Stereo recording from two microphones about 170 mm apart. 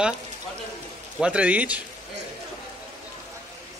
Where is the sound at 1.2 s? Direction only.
5° right (ahead or behind).